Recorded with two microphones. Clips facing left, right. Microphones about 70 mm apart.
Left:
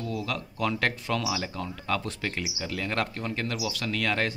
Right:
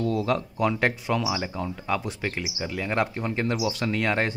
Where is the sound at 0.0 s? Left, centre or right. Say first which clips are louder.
Right 7 dB; right.